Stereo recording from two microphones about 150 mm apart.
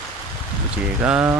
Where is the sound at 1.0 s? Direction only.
10° right (ahead or behind).